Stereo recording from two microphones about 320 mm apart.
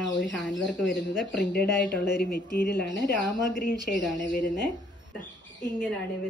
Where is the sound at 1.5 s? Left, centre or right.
Left.